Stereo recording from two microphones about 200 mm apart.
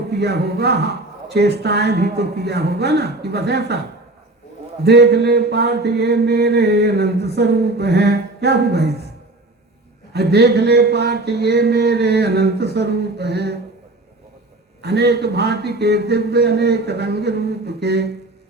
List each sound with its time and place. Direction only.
0.1 s speech: 55° right (ahead or behind)
4.8 s speech: 55° right (ahead or behind)
10.1 s speech: 55° right (ahead or behind)
14.8 s speech: 55° right (ahead or behind)